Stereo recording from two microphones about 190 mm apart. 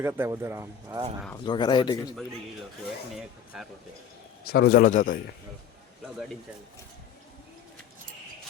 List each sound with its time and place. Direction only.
0.0 s speech: 15° right (ahead or behind)
1.5 s speech: 25° left (ahead or behind)
3.2 s speech: centre (ahead or behind)
4.4 s a man's voice: 55° left (ahead or behind)